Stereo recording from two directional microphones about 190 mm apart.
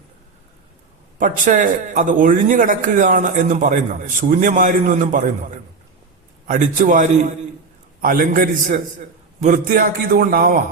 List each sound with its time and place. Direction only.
1.2 s a man's voice: 45° right (ahead or behind)
6.5 s a man's voice: 40° right (ahead or behind)